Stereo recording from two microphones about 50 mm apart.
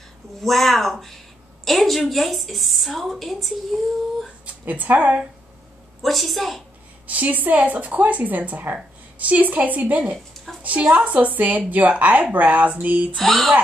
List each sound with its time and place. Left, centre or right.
0.4 s a woman's voice: centre
4.6 s a woman's voice: right
6.0 s a woman's voice: centre
7.1 s a woman's voice: right
13.1 s a woman's voice: centre